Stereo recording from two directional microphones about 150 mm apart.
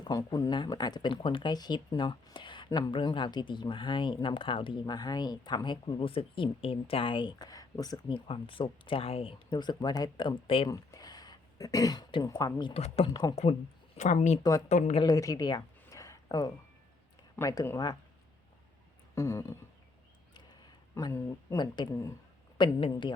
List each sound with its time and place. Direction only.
0.0 s speech: 25° left (ahead or behind)
10.7 s speech: 25° left (ahead or behind)
12.7 s speech: 45° left (ahead or behind)
13.1 s speech: 25° left (ahead or behind)
13.3 s speech: 45° left (ahead or behind)
15.0 s a sound: 20° left (ahead or behind)
17.3 s speech: 20° left (ahead or behind)
19.1 s speech: 20° left (ahead or behind)
20.3 s a sound: 25° left (ahead or behind)
21.6 s speech: 25° left (ahead or behind)